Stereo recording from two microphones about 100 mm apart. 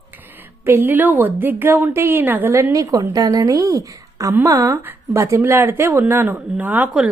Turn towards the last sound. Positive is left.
turn(degrees=-10)  # may be behind; listen again after turning